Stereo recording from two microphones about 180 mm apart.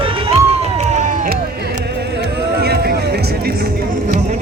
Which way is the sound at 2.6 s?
60° right (ahead or behind).